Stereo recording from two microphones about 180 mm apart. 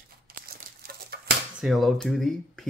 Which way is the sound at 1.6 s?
Centre (ahead or behind).